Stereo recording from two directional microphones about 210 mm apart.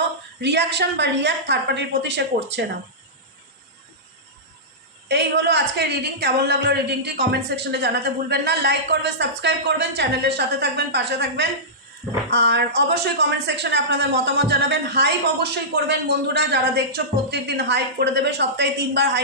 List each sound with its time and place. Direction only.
0.4 s a woman's voice: 55° right (ahead or behind)
5.0 s speech: 55° right (ahead or behind)